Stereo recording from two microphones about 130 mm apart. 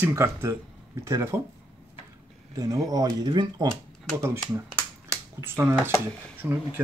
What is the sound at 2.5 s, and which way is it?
Speech, 30° right (ahead or behind).